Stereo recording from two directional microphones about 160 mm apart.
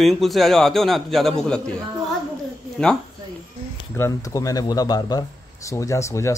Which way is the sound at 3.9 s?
20° left (ahead or behind).